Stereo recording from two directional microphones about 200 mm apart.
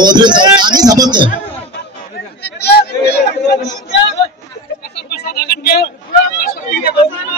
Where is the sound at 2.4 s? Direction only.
55° left (ahead or behind).